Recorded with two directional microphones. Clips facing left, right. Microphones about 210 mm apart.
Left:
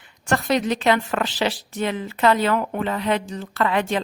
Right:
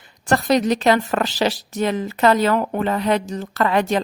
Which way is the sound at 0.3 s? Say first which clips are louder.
Right 4 dB; 35° right (ahead or behind).